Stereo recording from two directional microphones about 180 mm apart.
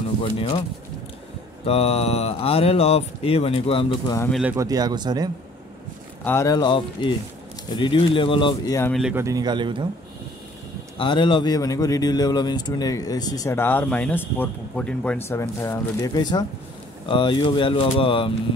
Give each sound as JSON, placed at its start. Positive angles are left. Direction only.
{"t": 1.7, "sound": "speech", "side_deg": 35}
{"t": 4.3, "sound": "speech", "side_deg": -5}
{"t": 4.6, "sound": "speech", "side_deg": -20}
{"t": 6.2, "sound": "speech", "side_deg": 15}
{"t": 9.1, "sound": "speech", "side_deg": -20}
{"t": 11.0, "sound": "speech", "side_deg": 25}